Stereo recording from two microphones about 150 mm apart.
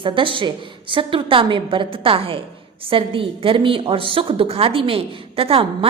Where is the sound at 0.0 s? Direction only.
35° right (ahead or behind).